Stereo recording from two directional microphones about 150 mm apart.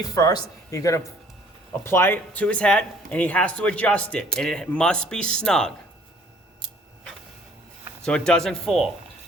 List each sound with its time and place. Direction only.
0.0 s speech: 25° left (ahead or behind); by 5.7 s 5° left (ahead or behind)
8.0 s speech: 5° left (ahead or behind)